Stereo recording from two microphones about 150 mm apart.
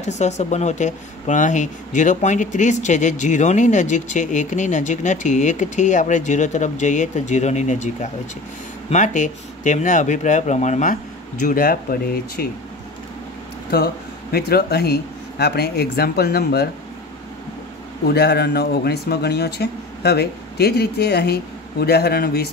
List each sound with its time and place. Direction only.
0.0 s speech: 50° left (ahead or behind)
11.4 s speech: 75° left (ahead or behind)
14.3 s speech: 90° left
18.0 s speech: 90° left